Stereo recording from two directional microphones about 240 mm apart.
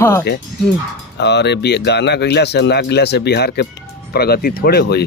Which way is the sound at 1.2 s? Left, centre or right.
Left.